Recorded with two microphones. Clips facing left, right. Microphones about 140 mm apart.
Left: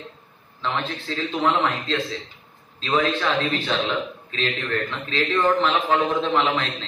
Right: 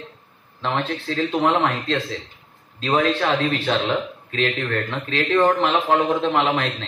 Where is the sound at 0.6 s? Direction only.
50° right (ahead or behind).